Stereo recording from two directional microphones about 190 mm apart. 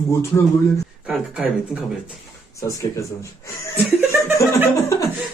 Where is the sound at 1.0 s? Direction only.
5° right (ahead or behind).